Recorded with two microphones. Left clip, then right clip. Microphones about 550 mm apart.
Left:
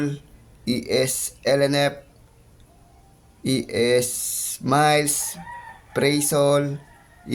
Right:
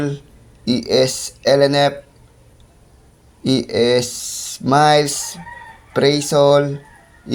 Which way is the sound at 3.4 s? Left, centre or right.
Left.